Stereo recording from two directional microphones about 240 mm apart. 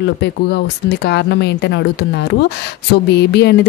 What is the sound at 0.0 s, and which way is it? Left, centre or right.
Speech, left.